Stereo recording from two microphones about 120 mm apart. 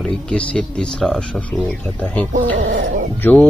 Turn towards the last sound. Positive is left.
turn(degrees=15)  # may be behind; listen again after turning